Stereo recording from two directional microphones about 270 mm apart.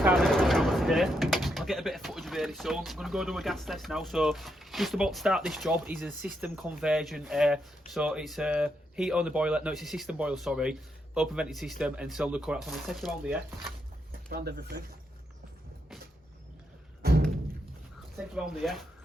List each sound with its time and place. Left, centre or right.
0.0 s speech: centre
14.3 s speech: right
17.0 s music: right
18.3 s speech: centre